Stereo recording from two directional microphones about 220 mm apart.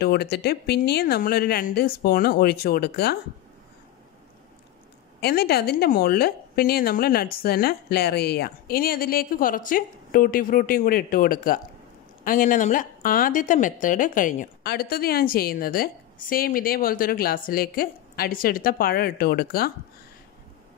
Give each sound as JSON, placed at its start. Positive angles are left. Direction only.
{"t": 0.0, "sound": "a woman's voice", "side_deg": 45}
{"t": 5.2, "sound": "a woman's voice", "side_deg": 45}